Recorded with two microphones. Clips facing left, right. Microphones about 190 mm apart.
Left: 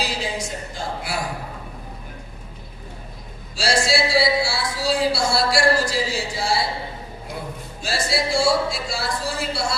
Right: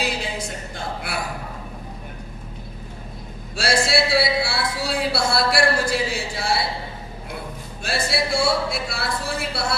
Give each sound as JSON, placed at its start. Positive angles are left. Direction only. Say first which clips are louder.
{"t": 0.0, "sound": "a sound", "louder": "even", "side_deg": -60}
{"t": 3.5, "sound": "music", "louder": "even", "side_deg": -60}
{"t": 7.8, "sound": "speech", "louder": "even", "side_deg": -60}